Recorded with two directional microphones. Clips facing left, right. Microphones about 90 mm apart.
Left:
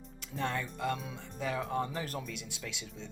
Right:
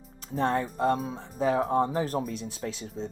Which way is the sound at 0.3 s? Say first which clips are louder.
Right 9 dB; 35° right (ahead or behind).